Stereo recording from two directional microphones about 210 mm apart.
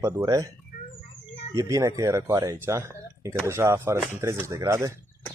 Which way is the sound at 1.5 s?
15° right (ahead or behind).